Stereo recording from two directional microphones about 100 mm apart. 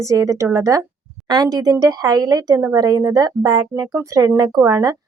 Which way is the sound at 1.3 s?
40° right (ahead or behind).